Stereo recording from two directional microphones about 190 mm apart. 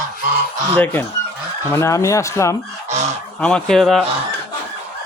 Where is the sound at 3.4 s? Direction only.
5° left (ahead or behind).